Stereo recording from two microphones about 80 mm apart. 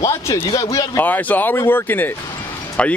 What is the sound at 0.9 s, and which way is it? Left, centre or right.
Speech, left.